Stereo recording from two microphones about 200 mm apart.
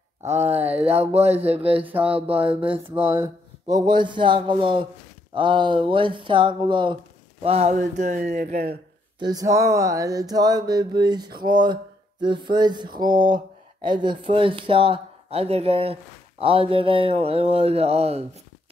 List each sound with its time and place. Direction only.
0.2 s speech: 35° right (ahead or behind)
0.6 s speech: 10° right (ahead or behind)
1.1 s speech: 30° right (ahead or behind)
2.1 s a sound: 25° right (ahead or behind)
7.4 s speech: 30° right (ahead or behind)
9.2 s a sound: 20° right (ahead or behind)